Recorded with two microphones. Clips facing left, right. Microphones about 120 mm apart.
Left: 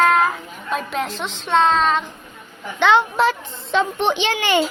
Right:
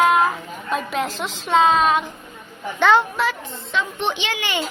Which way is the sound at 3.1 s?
30° left (ahead or behind).